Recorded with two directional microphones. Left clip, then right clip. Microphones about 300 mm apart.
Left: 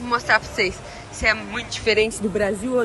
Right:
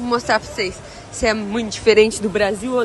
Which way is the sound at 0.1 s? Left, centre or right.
Centre.